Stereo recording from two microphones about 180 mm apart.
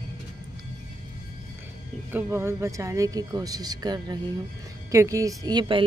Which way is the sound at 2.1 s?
15° right (ahead or behind).